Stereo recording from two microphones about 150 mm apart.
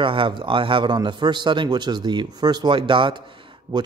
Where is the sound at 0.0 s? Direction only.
35° right (ahead or behind).